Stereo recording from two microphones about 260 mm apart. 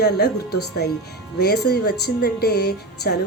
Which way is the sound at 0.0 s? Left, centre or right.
Left.